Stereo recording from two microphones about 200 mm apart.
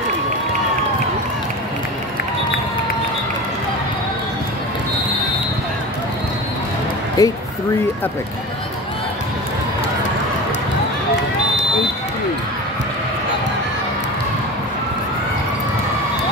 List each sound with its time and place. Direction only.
7.2 s speech: 20° left (ahead or behind)